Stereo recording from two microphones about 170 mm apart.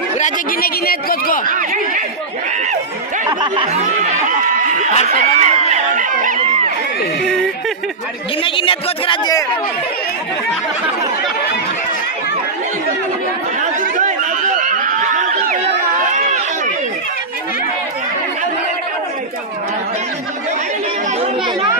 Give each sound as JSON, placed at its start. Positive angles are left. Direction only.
{"t": 0.2, "sound": "a man's voice", "side_deg": 60}
{"t": 1.5, "sound": "a sound", "side_deg": -50}
{"t": 3.3, "sound": "snicker", "side_deg": -25}
{"t": 3.6, "sound": "chatter", "side_deg": -40}
{"t": 5.2, "sound": "screaming", "side_deg": -40}
{"t": 8.4, "sound": "a man's voice", "side_deg": 30}
{"t": 13.6, "sound": "chatter", "side_deg": -45}